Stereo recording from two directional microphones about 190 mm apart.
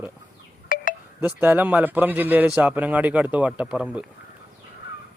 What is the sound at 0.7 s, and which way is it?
Wind chime, 45° left (ahead or behind).